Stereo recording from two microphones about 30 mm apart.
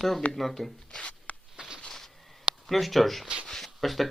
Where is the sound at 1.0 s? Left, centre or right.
Left.